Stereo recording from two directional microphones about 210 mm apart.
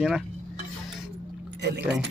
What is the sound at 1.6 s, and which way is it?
Speech, 55° right (ahead or behind).